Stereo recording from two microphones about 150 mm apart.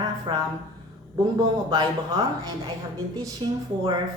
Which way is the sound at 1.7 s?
25° right (ahead or behind).